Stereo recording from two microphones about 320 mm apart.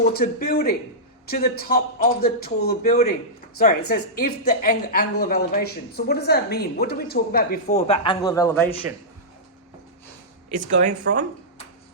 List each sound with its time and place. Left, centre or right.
0.0 s a woman's voice: left; by 8.7 s centre
10.5 s speech: right